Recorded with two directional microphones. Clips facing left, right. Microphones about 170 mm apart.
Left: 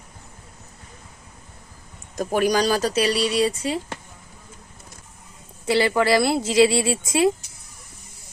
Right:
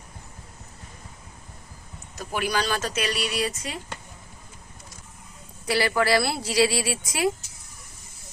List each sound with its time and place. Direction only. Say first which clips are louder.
2.1 s speech: left 7 dB; 45° left (ahead or behind)
5.6 s speech: left 4 dB; 25° left (ahead or behind)